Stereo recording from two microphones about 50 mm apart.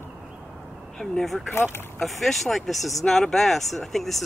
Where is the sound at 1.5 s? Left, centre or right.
Left.